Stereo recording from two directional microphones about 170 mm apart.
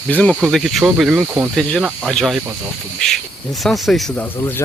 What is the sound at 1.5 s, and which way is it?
Speech, 5° left (ahead or behind).